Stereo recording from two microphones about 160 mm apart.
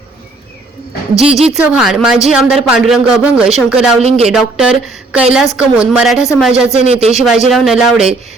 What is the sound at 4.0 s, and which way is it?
Speech, 40° right (ahead or behind).